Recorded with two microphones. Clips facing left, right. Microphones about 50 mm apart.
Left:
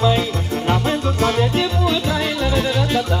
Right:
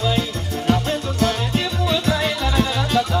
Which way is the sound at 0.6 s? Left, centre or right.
Left.